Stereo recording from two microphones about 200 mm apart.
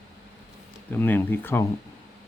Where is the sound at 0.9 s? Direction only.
10° left (ahead or behind).